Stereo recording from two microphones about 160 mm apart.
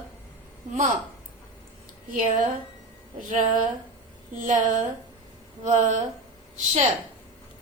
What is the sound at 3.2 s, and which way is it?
A woman's voice, 55° right (ahead or behind).